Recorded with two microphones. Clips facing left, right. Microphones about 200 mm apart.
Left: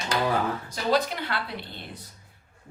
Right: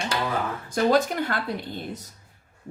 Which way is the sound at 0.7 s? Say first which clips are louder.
Right 6 dB; 50° right (ahead or behind).